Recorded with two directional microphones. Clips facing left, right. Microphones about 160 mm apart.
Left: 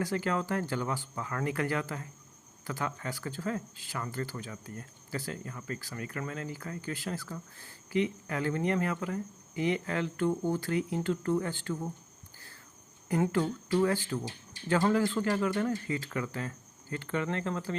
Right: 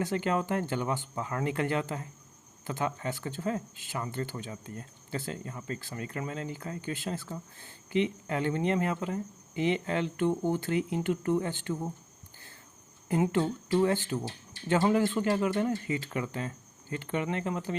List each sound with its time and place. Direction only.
0.0 s speech: 20° right (ahead or behind)
13.1 s speech: 20° right (ahead or behind)